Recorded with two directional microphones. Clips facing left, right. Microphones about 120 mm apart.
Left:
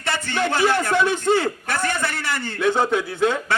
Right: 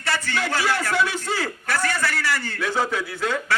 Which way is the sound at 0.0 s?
20° left (ahead or behind).